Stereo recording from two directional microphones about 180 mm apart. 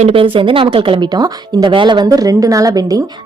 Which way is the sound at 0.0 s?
30° right (ahead or behind).